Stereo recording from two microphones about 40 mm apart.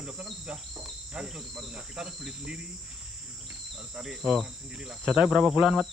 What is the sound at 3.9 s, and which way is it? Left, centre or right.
Speech, centre.